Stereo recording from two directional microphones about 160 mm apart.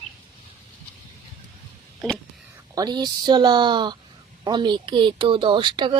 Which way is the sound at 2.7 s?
25° right (ahead or behind).